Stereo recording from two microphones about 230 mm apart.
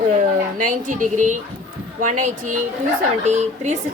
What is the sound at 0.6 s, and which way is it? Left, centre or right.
A woman's voice, right.